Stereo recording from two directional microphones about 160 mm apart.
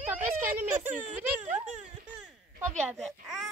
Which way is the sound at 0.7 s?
10° right (ahead or behind).